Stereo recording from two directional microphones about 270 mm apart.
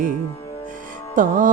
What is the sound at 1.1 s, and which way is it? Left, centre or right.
Music, right.